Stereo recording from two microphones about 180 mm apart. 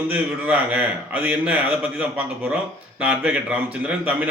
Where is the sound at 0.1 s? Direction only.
10° right (ahead or behind).